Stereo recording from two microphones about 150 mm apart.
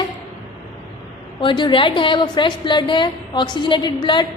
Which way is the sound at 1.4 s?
30° left (ahead or behind).